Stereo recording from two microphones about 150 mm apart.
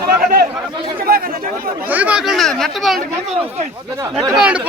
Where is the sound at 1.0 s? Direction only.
80° right.